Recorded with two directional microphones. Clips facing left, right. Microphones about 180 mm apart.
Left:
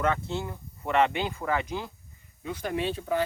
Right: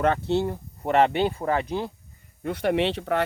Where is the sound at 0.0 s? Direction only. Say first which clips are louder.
Right 6 dB; 35° right (ahead or behind).